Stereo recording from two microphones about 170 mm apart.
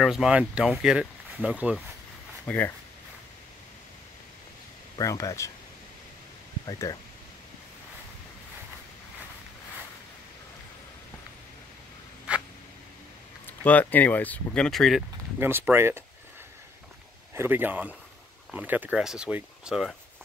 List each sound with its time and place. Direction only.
0.0 s speech: 5° right (ahead or behind)
2.4 s speech: 10° left (ahead or behind)
4.9 s speech: 20° left (ahead or behind)
6.6 s speech: 20° left (ahead or behind)
13.5 s speech: 10° left (ahead or behind)
15.3 s speech: 15° right (ahead or behind)
17.3 s speech: 15° right (ahead or behind)